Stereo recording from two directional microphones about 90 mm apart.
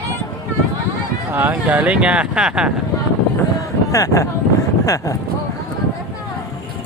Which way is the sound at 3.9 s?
40° left (ahead or behind).